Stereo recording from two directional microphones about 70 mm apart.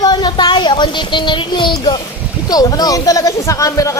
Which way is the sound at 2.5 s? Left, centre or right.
Left.